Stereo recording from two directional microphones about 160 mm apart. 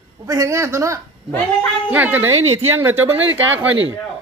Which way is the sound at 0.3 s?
20° right (ahead or behind).